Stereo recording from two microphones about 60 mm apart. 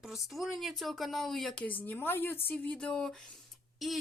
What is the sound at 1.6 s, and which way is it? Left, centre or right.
Speech, left.